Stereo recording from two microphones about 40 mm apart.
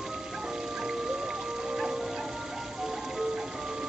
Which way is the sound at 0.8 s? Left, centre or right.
Centre.